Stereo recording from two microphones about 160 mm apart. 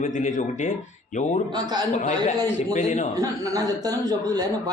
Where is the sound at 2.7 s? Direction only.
50° left (ahead or behind).